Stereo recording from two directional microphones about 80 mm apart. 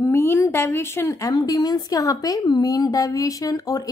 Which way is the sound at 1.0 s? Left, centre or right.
Left.